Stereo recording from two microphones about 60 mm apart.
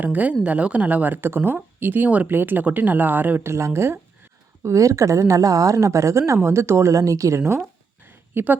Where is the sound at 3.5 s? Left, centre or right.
Right.